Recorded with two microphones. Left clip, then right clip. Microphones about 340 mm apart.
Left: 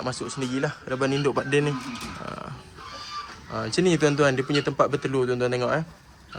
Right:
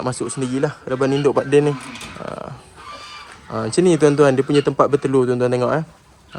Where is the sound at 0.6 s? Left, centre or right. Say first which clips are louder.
Right 6 dB; right.